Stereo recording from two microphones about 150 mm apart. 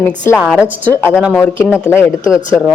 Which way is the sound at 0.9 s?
15° left (ahead or behind).